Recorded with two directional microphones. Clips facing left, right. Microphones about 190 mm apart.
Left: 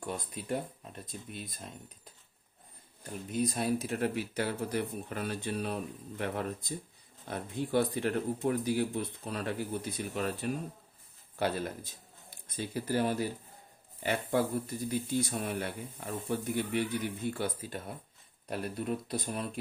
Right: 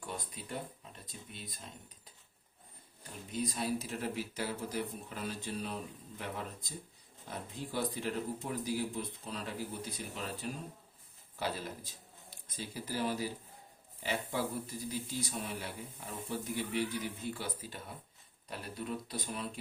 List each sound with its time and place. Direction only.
0.0 s speech: 50° left (ahead or behind)
3.3 s speech: 55° left (ahead or behind)